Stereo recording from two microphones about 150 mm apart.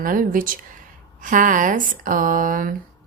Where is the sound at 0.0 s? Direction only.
65° right (ahead or behind).